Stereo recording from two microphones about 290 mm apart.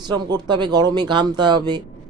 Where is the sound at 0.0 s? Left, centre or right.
Centre.